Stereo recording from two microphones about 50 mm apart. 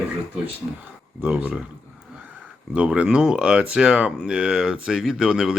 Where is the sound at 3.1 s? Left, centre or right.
Centre.